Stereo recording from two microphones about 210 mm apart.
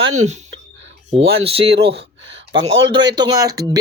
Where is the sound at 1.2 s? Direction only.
25° right (ahead or behind).